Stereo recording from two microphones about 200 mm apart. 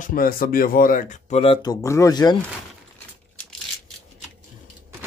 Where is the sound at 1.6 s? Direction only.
15° left (ahead or behind).